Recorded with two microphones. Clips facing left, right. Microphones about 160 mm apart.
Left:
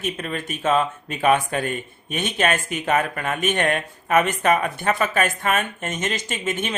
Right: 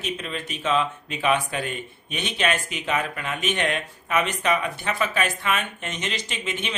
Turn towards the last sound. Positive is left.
turn(degrees=45)  # may be behind; listen again after turning